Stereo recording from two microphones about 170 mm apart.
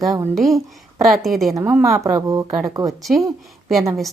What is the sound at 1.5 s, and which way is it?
Speech, 15° right (ahead or behind).